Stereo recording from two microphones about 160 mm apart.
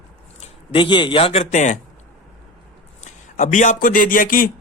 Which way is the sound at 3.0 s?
50° left (ahead or behind).